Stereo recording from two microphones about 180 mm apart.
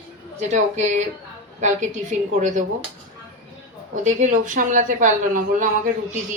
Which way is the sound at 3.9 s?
45° right (ahead or behind).